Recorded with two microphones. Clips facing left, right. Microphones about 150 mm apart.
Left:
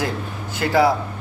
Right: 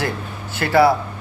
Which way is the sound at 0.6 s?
15° left (ahead or behind).